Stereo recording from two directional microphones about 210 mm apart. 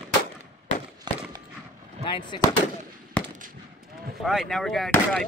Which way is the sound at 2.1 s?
20° left (ahead or behind).